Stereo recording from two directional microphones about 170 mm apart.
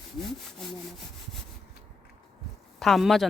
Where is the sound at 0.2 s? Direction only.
Centre (ahead or behind).